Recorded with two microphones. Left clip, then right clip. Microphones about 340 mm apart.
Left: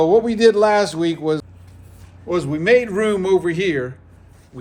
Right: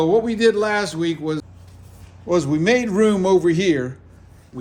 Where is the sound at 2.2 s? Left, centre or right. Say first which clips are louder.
Left 1 dB; centre.